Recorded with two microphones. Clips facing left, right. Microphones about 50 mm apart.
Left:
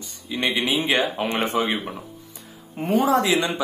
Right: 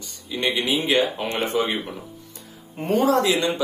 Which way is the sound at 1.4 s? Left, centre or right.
Left.